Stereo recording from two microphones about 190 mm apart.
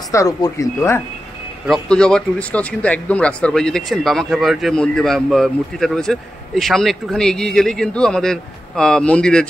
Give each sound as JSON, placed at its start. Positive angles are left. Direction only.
{"t": 0.1, "sound": "speech", "side_deg": 15}
{"t": 1.7, "sound": "speech", "side_deg": 5}